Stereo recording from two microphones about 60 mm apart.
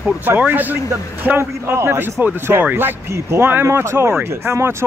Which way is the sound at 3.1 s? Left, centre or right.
Right.